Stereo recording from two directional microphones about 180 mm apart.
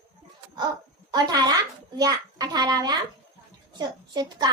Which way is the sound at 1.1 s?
20° right (ahead or behind).